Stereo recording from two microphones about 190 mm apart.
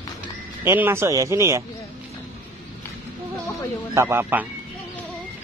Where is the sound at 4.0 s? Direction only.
15° right (ahead or behind).